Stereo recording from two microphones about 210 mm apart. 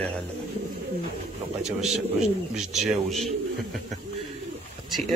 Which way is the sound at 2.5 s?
Centre (ahead or behind).